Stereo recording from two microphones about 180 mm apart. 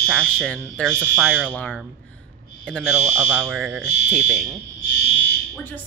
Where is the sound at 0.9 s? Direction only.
10° right (ahead or behind).